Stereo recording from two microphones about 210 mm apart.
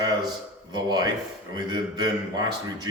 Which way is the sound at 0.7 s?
20° right (ahead or behind).